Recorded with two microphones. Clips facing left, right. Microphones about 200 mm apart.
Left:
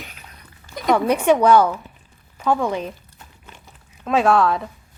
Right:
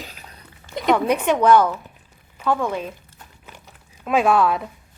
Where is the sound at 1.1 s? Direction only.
10° left (ahead or behind).